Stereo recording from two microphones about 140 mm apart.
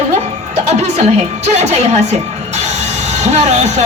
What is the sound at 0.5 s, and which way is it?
A woman's voice, 55° right (ahead or behind).